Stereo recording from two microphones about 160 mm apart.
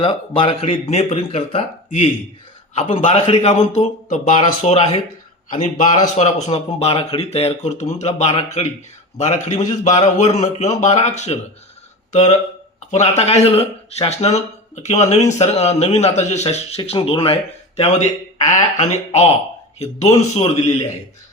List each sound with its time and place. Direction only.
0.0 s speech: 35° left (ahead or behind)
3.4 s speech: 45° left (ahead or behind)
5.5 s speech: 55° left (ahead or behind)
6.1 s speech: 40° left (ahead or behind)